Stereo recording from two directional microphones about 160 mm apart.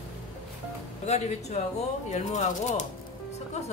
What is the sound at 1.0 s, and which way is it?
Speech, 45° left (ahead or behind).